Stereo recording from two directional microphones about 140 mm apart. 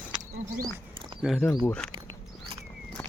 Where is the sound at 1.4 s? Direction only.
10° left (ahead or behind).